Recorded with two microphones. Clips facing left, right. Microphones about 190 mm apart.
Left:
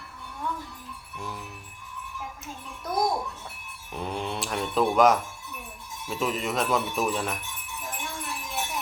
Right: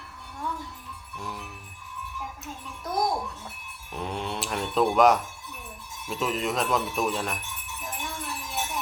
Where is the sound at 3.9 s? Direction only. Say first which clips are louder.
Left 1 dB; centre (ahead or behind).